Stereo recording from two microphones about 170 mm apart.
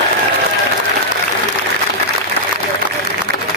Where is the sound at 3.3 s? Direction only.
70° right (ahead or behind).